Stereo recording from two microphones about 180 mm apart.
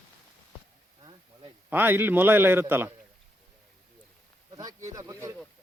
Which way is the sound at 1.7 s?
10° right (ahead or behind).